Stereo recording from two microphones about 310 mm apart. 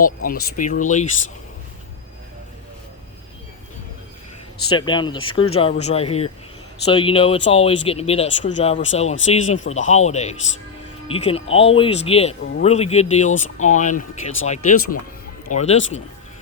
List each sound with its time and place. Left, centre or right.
0.5 s speech: left
4.7 s speech: centre